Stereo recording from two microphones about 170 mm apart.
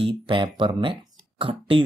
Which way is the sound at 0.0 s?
30° right (ahead or behind).